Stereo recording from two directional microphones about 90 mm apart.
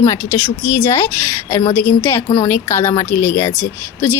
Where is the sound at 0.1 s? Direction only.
30° left (ahead or behind).